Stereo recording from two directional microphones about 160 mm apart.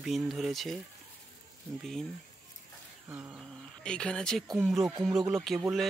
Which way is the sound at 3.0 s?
10° right (ahead or behind).